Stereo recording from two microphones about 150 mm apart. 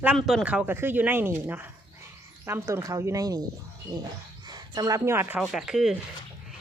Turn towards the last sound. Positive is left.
turn(degrees=-5)  # may be behind; listen again after turning